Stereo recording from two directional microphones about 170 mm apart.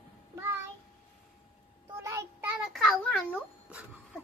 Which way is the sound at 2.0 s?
15° right (ahead or behind).